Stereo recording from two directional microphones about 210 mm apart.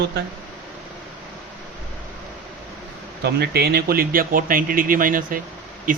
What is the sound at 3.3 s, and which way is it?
Speech, 50° right (ahead or behind).